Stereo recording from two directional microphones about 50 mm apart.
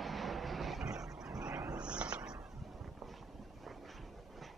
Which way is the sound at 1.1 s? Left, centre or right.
Centre.